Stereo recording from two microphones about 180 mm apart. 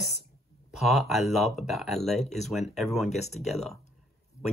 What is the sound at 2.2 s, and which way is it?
Speech, 40° left (ahead or behind).